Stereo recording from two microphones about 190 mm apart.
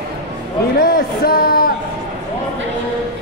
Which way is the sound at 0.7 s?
50° left (ahead or behind).